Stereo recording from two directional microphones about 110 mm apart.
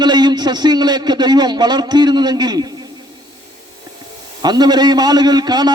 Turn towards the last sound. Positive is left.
turn(degrees=-40)  # may be behind; listen again after turning